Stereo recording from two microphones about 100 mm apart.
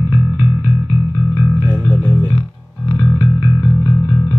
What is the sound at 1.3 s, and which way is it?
Music, 20° left (ahead or behind).